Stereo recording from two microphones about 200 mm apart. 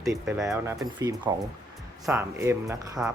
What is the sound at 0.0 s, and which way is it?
Speech, 15° right (ahead or behind).